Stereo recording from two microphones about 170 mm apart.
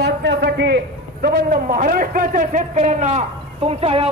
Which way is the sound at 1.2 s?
50° right (ahead or behind).